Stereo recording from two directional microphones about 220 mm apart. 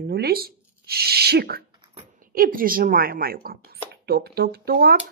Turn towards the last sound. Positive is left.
turn(degrees=-45)  # may be behind; listen again after turning